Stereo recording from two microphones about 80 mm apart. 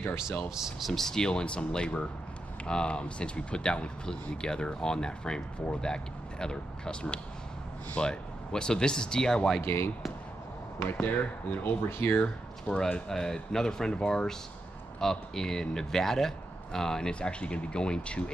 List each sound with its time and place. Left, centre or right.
0.6 s speech: centre
9.6 s speech: left; by 18.2 s centre